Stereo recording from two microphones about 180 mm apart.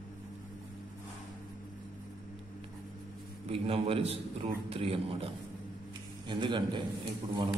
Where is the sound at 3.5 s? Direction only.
30° right (ahead or behind).